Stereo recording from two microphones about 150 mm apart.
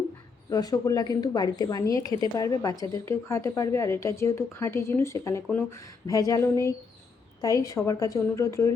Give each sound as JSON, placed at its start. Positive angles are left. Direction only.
{"t": 0.5, "sound": "a woman's voice", "side_deg": 25}